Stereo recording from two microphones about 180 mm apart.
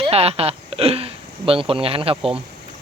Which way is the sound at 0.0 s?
35° right (ahead or behind).